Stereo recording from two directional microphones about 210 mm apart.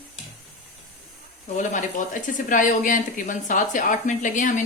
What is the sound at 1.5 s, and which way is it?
Speech, 35° left (ahead or behind).